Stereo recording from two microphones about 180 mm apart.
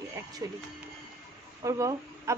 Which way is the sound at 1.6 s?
15° right (ahead or behind).